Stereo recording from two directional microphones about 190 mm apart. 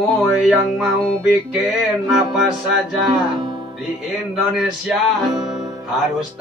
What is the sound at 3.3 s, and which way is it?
Music, 25° right (ahead or behind).